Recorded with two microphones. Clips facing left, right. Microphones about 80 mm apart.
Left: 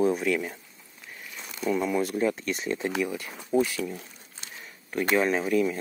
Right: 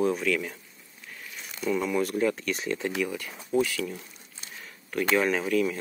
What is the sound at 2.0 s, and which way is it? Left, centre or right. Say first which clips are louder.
Speech: even; centre.